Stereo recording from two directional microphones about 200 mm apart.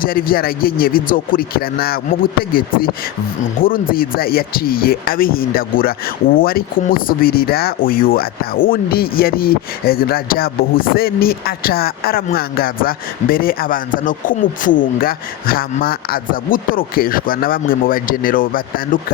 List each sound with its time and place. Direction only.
0.0 s speech: 45° left (ahead or behind)